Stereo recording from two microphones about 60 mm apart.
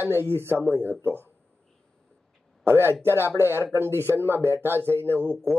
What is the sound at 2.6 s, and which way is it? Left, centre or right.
Speech, right.